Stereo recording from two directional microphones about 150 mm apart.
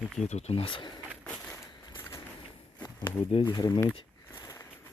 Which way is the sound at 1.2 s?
5° left (ahead or behind).